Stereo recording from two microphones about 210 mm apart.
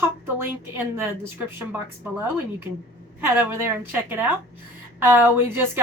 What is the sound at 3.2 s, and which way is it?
A woman's voice, 10° right (ahead or behind).